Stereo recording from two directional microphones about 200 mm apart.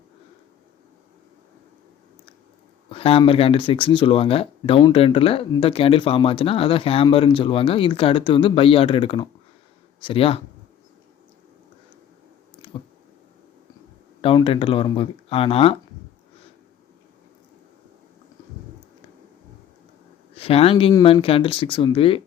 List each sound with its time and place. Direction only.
2.9 s speech: 30° left (ahead or behind)
14.2 s speech: 25° left (ahead or behind)
20.3 s speech: 30° left (ahead or behind)